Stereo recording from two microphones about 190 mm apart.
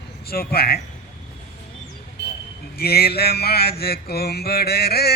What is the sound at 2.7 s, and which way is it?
Mantra, 55° left (ahead or behind).